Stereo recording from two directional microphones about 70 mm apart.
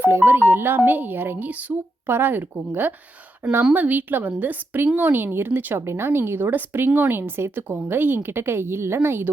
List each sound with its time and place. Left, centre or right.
0.0 s a woman's voice: right